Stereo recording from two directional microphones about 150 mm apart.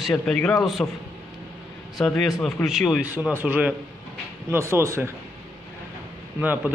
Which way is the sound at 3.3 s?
10° right (ahead or behind).